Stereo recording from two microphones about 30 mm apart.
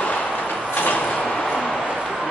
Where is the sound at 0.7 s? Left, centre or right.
Left.